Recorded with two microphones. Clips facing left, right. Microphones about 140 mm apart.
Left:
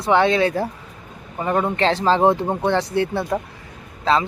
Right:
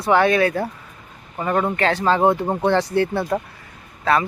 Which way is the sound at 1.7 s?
25° left (ahead or behind).